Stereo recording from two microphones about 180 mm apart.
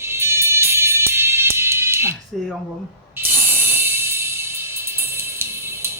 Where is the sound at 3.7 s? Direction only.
10° right (ahead or behind).